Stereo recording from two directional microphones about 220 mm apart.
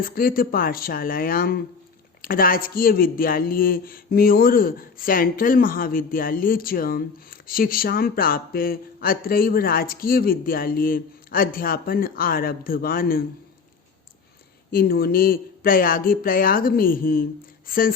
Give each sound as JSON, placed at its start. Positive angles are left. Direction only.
{"t": 0.0, "sound": "speech", "side_deg": 40}
{"t": 14.7, "sound": "speech", "side_deg": 40}